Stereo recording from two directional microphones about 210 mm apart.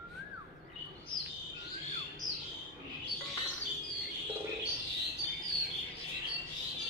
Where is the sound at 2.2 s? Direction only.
20° left (ahead or behind).